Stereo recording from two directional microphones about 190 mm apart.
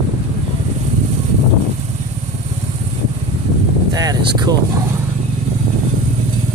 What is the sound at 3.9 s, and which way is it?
Speech, 20° right (ahead or behind).